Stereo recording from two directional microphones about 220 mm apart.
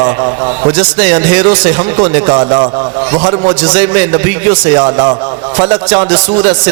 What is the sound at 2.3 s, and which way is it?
A man's voice, 25° right (ahead or behind).